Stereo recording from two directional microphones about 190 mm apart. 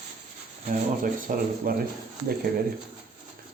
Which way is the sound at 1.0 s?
45° right (ahead or behind).